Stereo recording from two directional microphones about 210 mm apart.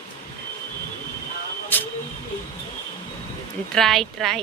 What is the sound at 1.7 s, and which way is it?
Speech, 10° left (ahead or behind).